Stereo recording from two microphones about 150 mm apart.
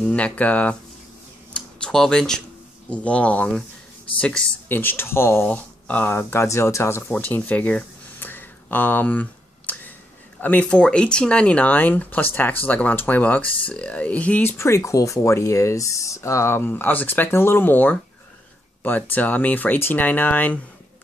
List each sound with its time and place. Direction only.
0.0 s speech: 10° left (ahead or behind)
1.5 s a sound: 5° left (ahead or behind)
2.9 s speech: 10° left (ahead or behind)